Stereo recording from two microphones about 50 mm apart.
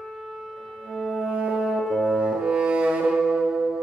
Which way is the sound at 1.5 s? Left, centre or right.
Centre.